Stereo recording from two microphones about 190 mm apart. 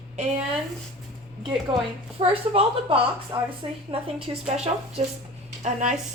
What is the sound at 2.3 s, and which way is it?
A woman's voice, 30° right (ahead or behind).